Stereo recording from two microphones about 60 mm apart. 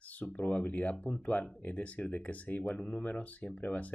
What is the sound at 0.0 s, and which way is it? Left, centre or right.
Speech, left.